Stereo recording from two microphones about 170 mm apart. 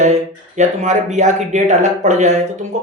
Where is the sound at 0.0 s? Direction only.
45° right (ahead or behind).